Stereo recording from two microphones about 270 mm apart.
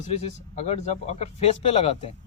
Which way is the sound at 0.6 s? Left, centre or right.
Left.